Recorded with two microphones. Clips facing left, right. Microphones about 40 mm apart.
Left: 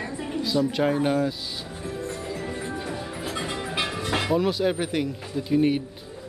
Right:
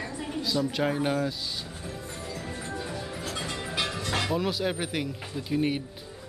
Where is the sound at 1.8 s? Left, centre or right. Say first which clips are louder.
Left 6 dB; centre.